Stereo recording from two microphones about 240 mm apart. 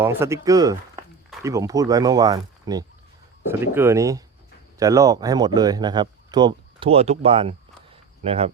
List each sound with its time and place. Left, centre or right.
0.0 s speech: centre; by 8.5 s right